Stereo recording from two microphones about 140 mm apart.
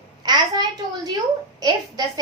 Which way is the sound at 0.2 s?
30° right (ahead or behind).